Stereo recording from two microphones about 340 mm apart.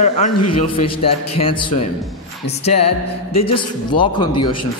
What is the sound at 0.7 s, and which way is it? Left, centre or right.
A man's voice, centre.